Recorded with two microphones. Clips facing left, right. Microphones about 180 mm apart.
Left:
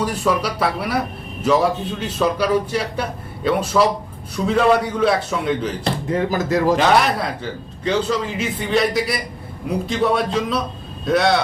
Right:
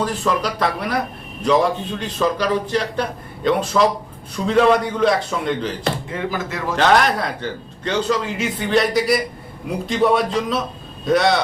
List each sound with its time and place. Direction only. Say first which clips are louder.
0.0 s a man's voice: left 1 dB; 5° left (ahead or behind)
5.8 s speech: left 3 dB; 40° left (ahead or behind)
6.7 s a man's voice: even; 5° left (ahead or behind)